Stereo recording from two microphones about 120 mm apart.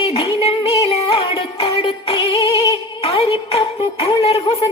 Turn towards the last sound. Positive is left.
turn(degrees=50)  # may be behind; listen again after turning